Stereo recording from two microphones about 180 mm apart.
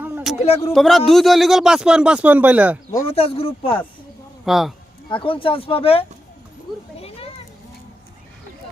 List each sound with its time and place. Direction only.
0.0 s a sound: 10° right (ahead or behind)
0.4 s speech: 35° left (ahead or behind)
0.7 s speech: centre (ahead or behind)
3.1 s speech: 35° left (ahead or behind)
4.4 s speech: centre (ahead or behind)
5.0 s speech: 30° left (ahead or behind)